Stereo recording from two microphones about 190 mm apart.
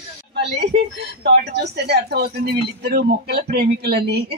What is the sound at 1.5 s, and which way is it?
Speech, 60° right (ahead or behind).